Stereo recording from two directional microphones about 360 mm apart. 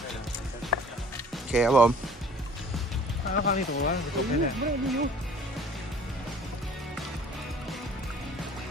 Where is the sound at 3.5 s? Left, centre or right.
Left.